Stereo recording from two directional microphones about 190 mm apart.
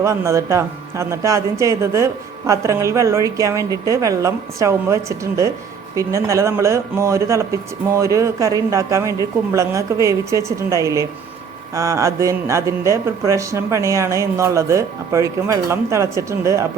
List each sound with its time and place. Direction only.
0.0 s speech: 15° right (ahead or behind)